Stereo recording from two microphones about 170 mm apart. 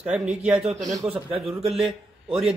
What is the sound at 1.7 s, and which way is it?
Speech, centre (ahead or behind).